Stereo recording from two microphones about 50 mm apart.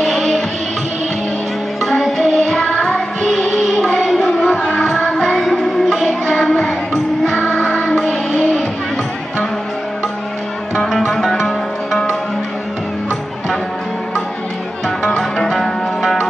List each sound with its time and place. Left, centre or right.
0.0 s music: centre
1.9 s music: centre
3.3 s music: centre
4.0 s a sound: centre
5.0 s music: centre
7.6 s music: left
10.9 s music: centre
15.1 s music: centre